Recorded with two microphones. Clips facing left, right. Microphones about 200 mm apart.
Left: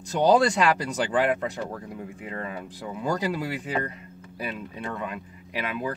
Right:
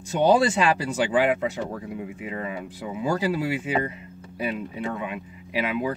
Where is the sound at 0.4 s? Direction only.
5° right (ahead or behind).